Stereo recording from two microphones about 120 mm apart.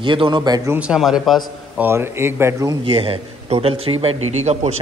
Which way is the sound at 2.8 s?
50° right (ahead or behind).